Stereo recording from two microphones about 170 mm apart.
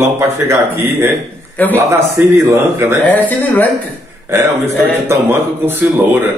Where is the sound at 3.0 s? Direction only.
10° left (ahead or behind).